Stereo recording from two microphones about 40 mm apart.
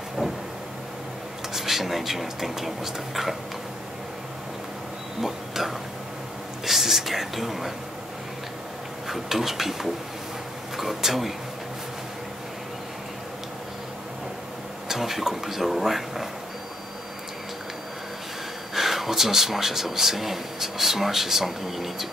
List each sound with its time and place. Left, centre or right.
0.2 s vehicle: centre
1.5 s a man's voice: centre
5.2 s a sound: centre
6.6 s whispering: centre
9.1 s a man's voice: centre
14.9 s a man's voice: centre
18.8 s a man's voice: centre